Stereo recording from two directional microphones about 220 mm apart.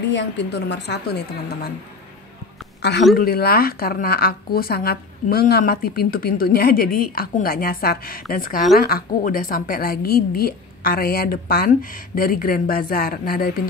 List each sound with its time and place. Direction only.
0.1 s a woman's voice: 50° left (ahead or behind)
2.8 s a woman's voice: 50° left (ahead or behind)